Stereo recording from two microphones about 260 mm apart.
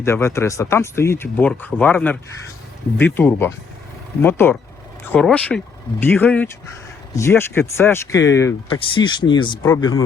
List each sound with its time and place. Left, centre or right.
0.0 s speech: centre